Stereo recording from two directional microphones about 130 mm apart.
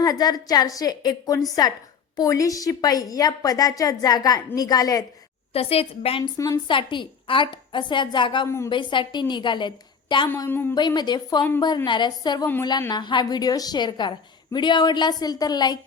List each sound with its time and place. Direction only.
0.0 s a woman's voice: 30° left (ahead or behind)
5.5 s a woman's voice: 50° left (ahead or behind)
6.3 s a woman's voice: 25° left (ahead or behind)
6.7 s a woman's voice: 40° left (ahead or behind)
8.4 s a woman's voice: 20° left (ahead or behind)
8.7 s a woman's voice: 40° left (ahead or behind)
10.2 s a woman's voice: 20° left (ahead or behind)
10.8 s a woman's voice: 35° left (ahead or behind)